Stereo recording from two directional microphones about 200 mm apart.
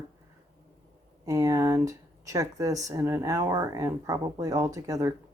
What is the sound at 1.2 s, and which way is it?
Speech, 15° right (ahead or behind).